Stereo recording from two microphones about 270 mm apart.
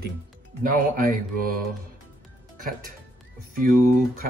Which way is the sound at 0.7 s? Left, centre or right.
Right.